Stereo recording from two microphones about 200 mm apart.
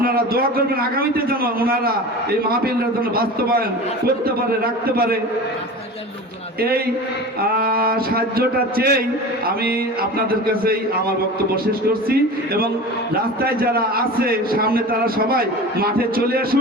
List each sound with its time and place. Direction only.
0.0 s a man's voice: 50° right (ahead or behind)
3.2 s a man's voice: 50° right (ahead or behind)
4.6 s a man's voice: 50° right (ahead or behind)
6.6 s a man's voice: 50° right (ahead or behind)
12.0 s a man's voice: 50° right (ahead or behind)